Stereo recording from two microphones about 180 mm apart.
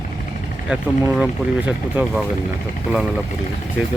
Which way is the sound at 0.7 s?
5° right (ahead or behind).